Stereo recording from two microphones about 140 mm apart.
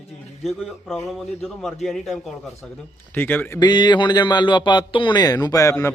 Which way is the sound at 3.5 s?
30° left (ahead or behind).